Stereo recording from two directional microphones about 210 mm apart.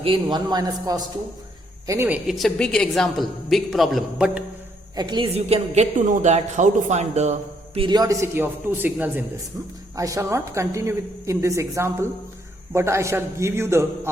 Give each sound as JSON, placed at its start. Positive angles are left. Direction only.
{"t": 0.0, "sound": "a woman's voice", "side_deg": -25}
{"t": 2.2, "sound": "a woman's voice", "side_deg": 0}
{"t": 4.9, "sound": "a woman's voice", "side_deg": -20}